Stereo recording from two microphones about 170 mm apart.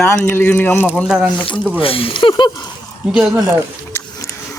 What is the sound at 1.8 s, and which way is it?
Speech, 35° left (ahead or behind).